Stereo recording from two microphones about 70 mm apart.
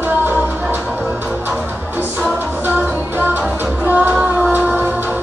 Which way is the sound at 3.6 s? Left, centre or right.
Right.